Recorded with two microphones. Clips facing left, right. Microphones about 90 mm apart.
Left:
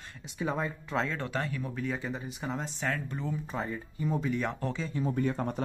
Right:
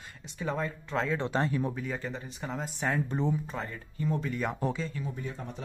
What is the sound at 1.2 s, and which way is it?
Speech, 25° right (ahead or behind).